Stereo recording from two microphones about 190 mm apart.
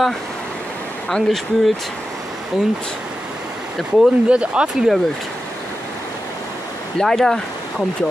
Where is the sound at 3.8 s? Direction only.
5° right (ahead or behind).